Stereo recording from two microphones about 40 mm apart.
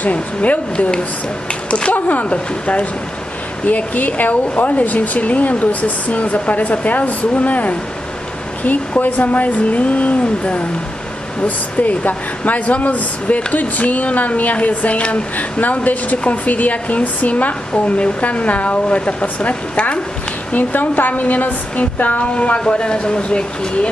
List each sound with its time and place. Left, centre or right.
0.0 s a woman's voice: left
2.0 s a woman's voice: left
2.2 s a woman's voice: left
20.5 s a woman's voice: left